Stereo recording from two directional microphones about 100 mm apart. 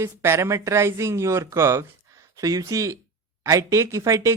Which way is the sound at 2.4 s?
35° right (ahead or behind).